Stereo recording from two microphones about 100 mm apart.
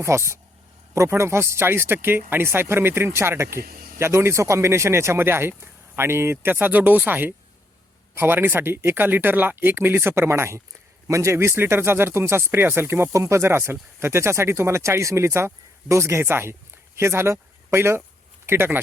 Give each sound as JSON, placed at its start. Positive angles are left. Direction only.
{"t": 0.0, "sound": "speech", "side_deg": -30}